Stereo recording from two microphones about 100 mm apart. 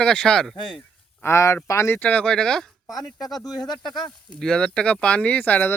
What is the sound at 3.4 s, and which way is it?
Speech, 40° left (ahead or behind).